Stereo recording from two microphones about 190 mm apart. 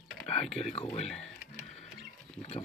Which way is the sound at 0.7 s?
35° left (ahead or behind).